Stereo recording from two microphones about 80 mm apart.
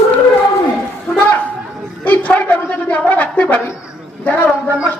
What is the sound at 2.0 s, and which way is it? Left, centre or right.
A man's voice, left.